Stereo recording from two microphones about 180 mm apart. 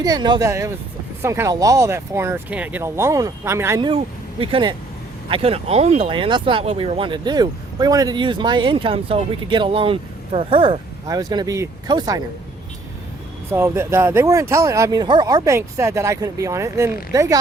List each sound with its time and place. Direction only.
0.0 s speech: 20° right (ahead or behind)
3.8 s speech: 30° right (ahead or behind)
13.5 s speech: 15° right (ahead or behind)